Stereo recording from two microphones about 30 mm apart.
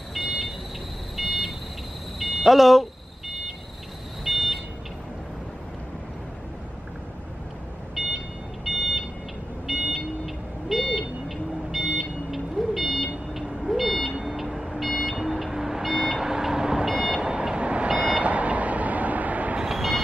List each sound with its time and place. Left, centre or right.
0.1 s vehicle: centre
2.1 s a sound: centre
4.2 s a sound: centre
8.0 s a sound: centre
8.6 s smoke detector: centre
11.2 s buzzer: centre
14.2 s vehicle: centre
15.8 s vehicle: centre
16.2 s vehicle: centre
16.9 s vehicle: centre
17.2 s vehicle: right
17.8 s vehicle: right
18.2 s a sound: right
19.7 s vehicle: centre